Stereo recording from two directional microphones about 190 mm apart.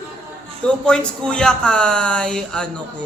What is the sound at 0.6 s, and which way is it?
A man's voice, 5° left (ahead or behind).